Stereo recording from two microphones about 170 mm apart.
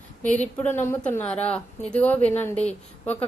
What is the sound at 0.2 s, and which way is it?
A woman's voice, 10° left (ahead or behind).